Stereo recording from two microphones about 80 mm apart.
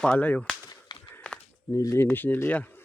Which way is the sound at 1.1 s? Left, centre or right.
Centre.